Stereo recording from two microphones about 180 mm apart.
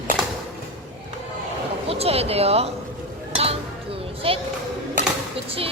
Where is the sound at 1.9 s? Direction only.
35° right (ahead or behind).